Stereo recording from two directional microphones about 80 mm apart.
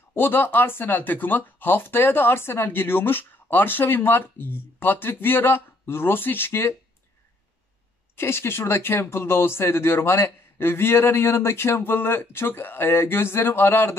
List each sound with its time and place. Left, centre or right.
0.1 s speech: left
8.2 s speech: left